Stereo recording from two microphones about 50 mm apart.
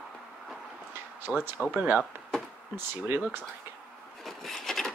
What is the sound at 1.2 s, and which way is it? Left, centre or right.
Speech, right.